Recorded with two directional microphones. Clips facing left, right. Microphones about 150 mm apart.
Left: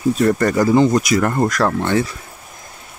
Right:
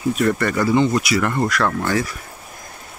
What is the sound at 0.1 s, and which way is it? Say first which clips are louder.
Speech: left 4 dB; 35° left (ahead or behind).